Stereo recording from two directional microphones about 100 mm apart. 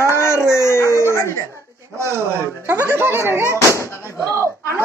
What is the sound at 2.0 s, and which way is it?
Speech, 25° right (ahead or behind).